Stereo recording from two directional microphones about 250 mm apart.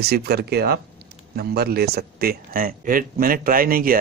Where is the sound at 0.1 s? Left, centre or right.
Right.